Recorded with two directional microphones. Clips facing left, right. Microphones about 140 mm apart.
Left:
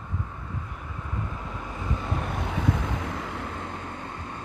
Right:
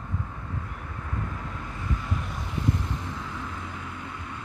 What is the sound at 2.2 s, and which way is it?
Vehicle, 60° left (ahead or behind).